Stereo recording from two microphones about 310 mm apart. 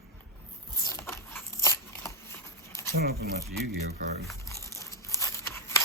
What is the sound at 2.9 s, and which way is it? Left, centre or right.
Speech, right.